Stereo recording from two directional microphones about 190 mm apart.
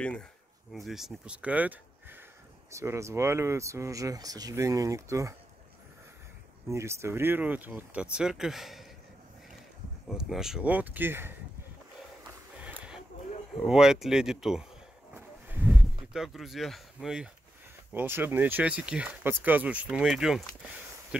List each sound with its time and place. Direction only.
0.0 s speech: 5° left (ahead or behind); by 5.3 s 15° right (ahead or behind)
6.7 s speech: 15° right (ahead or behind)
10.0 s speech: centre (ahead or behind)
12.5 s a sound: 5° right (ahead or behind)
13.6 s speech: centre (ahead or behind)
15.1 s a sound: 10° right (ahead or behind)
17.9 s speech: 10° right (ahead or behind)